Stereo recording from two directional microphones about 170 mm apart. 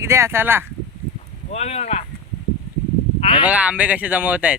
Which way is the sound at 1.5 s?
40° left (ahead or behind).